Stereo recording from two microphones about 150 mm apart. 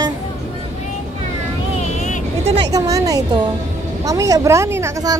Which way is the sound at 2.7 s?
20° right (ahead or behind).